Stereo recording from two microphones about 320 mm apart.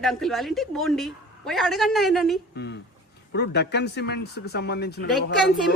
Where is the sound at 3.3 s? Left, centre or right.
Left.